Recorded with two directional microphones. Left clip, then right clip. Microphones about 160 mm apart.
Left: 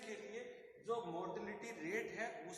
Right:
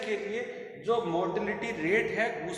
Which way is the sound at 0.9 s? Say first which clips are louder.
Right 15 dB; 45° right (ahead or behind).